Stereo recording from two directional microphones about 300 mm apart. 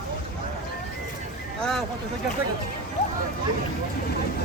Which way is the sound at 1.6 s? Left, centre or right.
Centre.